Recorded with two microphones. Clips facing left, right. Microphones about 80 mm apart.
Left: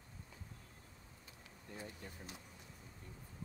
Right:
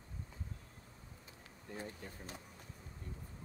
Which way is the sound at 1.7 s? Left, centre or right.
Right.